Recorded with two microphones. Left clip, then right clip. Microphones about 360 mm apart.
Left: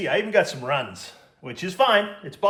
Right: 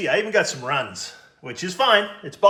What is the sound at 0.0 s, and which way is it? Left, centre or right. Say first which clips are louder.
A man's voice: right 1 dB; centre.